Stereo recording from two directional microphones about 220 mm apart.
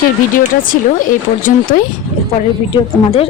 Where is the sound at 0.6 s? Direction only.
40° left (ahead or behind).